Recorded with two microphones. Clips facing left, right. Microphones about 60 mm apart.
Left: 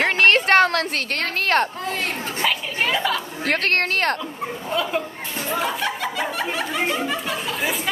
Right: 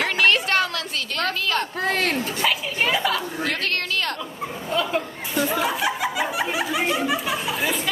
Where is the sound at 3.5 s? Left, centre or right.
Left.